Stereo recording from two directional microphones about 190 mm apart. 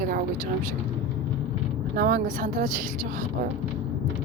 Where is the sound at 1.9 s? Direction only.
50° right (ahead or behind).